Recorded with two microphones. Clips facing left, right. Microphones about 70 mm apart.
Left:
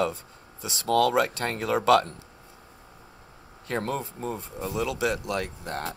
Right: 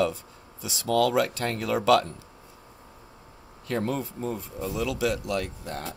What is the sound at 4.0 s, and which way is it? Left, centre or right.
Speech, left.